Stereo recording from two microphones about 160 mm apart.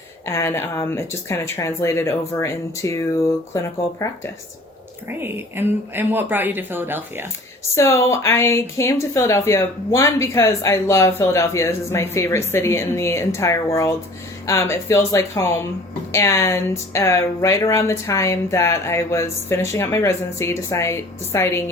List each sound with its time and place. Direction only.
0.3 s speech: 15° left (ahead or behind)
5.0 s a woman's voice: 15° right (ahead or behind)
7.8 s speech: 15° left (ahead or behind)